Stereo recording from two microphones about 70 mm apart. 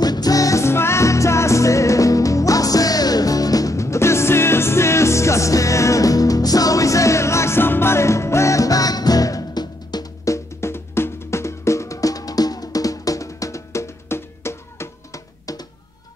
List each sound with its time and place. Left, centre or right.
0.0 s music: left
10.2 s music: left